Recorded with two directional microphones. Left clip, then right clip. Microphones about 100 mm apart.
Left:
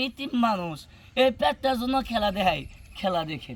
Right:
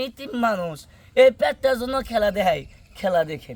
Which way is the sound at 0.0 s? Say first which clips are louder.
Right 2 dB; 50° right (ahead or behind).